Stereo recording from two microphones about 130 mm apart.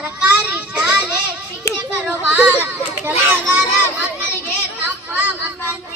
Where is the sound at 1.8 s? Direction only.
10° right (ahead or behind).